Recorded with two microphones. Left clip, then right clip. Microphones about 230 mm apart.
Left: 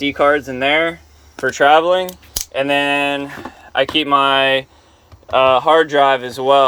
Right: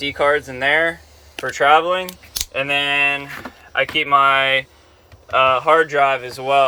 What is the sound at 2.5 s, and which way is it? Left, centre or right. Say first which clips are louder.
Speech: left 3 dB; left.